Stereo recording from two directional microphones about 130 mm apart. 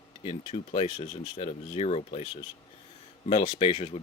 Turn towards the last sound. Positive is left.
turn(degrees=50)  # may be behind; listen again after turning